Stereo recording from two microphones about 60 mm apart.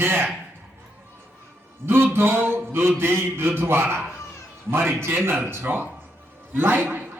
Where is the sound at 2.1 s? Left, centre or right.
Right.